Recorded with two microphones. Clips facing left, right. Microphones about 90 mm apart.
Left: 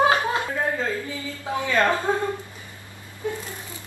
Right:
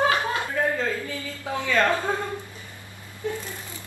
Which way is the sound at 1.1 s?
15° left (ahead or behind).